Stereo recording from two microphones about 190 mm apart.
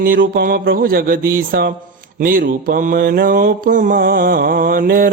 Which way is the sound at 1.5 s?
55° right (ahead or behind).